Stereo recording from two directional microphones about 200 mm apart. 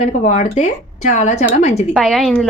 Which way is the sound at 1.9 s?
Centre (ahead or behind).